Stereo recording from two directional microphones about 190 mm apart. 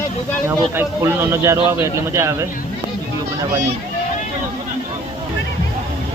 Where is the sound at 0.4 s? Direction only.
15° right (ahead or behind).